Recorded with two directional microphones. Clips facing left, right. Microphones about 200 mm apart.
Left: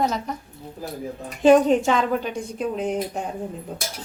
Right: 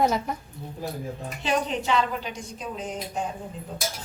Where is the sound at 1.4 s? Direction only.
50° left (ahead or behind).